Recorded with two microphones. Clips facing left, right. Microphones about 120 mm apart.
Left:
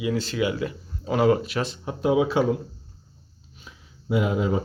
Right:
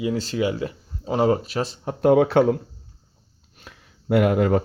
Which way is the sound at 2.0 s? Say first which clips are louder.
Right 5 dB; 60° right (ahead or behind).